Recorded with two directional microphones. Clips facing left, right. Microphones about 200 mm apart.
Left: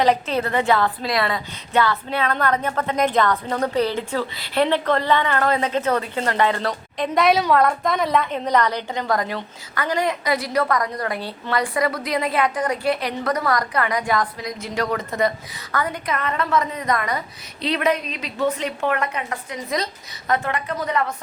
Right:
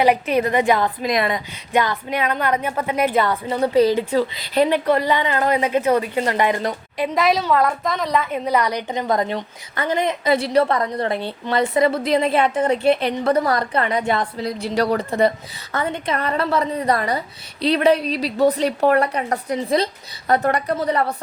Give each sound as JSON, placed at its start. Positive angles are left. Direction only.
{"t": 0.0, "sound": "a woman's voice", "side_deg": -15}
{"t": 7.1, "sound": "a woman's voice", "side_deg": 0}